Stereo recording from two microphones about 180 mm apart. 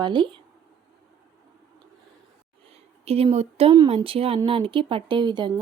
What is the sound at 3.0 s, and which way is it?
Speech, 35° right (ahead or behind).